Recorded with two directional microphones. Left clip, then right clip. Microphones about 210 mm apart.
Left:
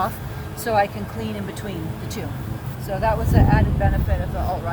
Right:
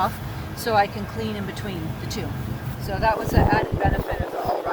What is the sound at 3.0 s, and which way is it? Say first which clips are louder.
Speech: right 1 dB; 20° left (ahead or behind).